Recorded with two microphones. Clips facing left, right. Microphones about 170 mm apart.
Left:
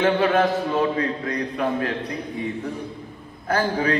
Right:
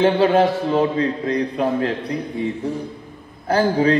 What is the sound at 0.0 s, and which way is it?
A man's voice, 30° right (ahead or behind).